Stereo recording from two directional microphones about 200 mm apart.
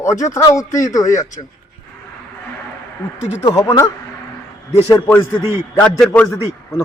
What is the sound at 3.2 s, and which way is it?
Speech, 35° left (ahead or behind).